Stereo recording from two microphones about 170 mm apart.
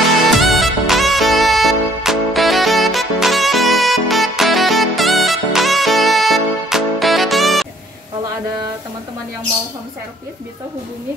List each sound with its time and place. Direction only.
0.4 s music: centre (ahead or behind)